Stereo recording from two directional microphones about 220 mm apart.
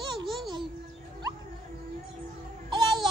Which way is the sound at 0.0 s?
20° right (ahead or behind).